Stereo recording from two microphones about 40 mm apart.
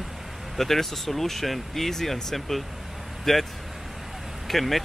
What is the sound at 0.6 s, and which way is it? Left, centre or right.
Speech, centre.